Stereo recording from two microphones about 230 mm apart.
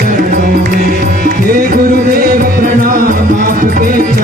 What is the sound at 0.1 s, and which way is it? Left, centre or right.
Music, right.